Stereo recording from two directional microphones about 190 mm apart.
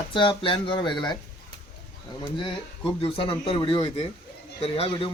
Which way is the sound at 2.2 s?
25° left (ahead or behind).